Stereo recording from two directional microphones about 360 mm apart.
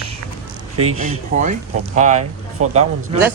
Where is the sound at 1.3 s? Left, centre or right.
Centre.